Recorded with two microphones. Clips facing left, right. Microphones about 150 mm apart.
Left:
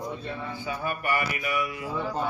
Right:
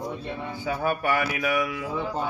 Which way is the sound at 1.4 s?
90° right.